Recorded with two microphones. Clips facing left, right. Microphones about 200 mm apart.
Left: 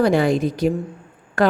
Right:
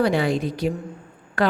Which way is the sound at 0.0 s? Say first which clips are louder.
Left 4 dB; 45° left (ahead or behind).